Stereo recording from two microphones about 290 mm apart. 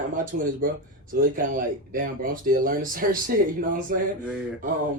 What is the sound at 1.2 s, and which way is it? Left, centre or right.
Speech, right.